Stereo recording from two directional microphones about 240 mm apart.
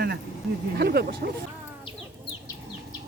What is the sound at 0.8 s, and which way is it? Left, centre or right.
Speech, right.